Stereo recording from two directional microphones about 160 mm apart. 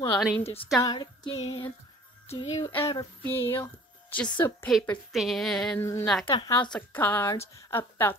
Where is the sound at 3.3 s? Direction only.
15° left (ahead or behind).